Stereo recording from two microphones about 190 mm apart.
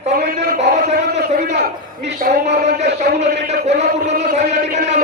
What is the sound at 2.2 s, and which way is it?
A man's voice, 40° right (ahead or behind).